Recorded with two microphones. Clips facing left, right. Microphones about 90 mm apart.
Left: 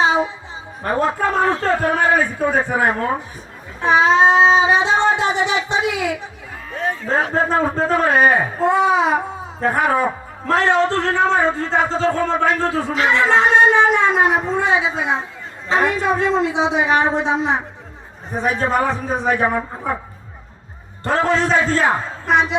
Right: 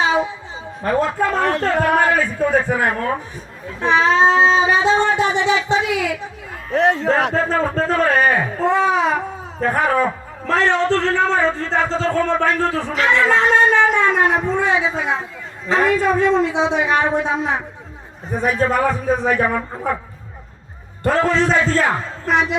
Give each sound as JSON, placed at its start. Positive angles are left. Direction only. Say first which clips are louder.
{"t": 0.0, "sound": "a sound", "louder": "left 1 dB", "side_deg": 20}
{"t": 0.9, "sound": "a man's voice", "louder": "right 1 dB", "side_deg": 25}
{"t": 1.4, "sound": "speech", "louder": "left 1 dB", "side_deg": -65}
{"t": 2.1, "sound": "a man's voice", "louder": "even", "side_deg": 25}
{"t": 3.9, "sound": "a sound", "louder": "left 1 dB", "side_deg": 20}
{"t": 6.7, "sound": "speech", "louder": "right 8 dB", "side_deg": -80}
{"t": 7.5, "sound": "a man's voice", "louder": "left 1 dB", "side_deg": 15}
{"t": 16.9, "sound": "a man's voice", "louder": "left 1 dB", "side_deg": 25}
{"t": 21.0, "sound": "a man's voice", "louder": "right 1 dB", "side_deg": 25}
{"t": 21.4, "sound": "a man's voice", "louder": "even", "side_deg": 5}
{"t": 21.8, "sound": "speech", "louder": "left 2 dB", "side_deg": 30}